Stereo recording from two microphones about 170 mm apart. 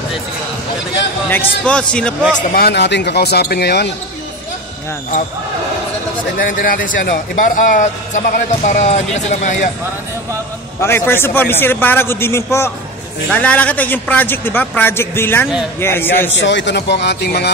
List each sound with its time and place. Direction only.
1.3 s a man's voice: 10° left (ahead or behind)
2.5 s speech: 75° left (ahead or behind)
6.3 s a man's voice: 55° left (ahead or behind)
10.8 s a man's voice: 15° left (ahead or behind)
16.3 s speech: 90° left; by 17.5 s 75° left (ahead or behind)